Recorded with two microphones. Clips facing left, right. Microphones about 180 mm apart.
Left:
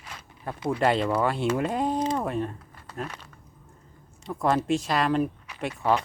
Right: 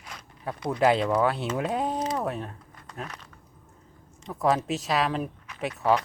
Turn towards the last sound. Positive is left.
turn(degrees=0)  # may be behind; listen again after turning